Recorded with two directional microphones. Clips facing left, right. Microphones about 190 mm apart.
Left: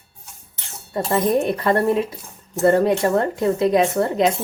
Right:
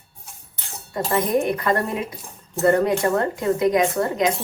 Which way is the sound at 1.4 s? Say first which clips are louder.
Left 4 dB; 30° left (ahead or behind).